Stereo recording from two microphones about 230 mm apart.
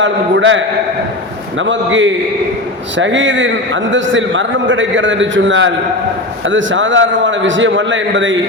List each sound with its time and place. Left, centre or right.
0.0 s a man's voice: right